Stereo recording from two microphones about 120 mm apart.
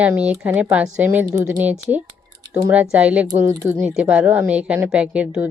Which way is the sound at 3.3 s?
25° right (ahead or behind).